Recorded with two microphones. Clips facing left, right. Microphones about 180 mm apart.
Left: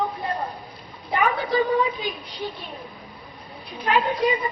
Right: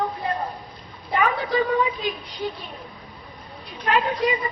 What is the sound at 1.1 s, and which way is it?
A woman's voice, centre (ahead or behind).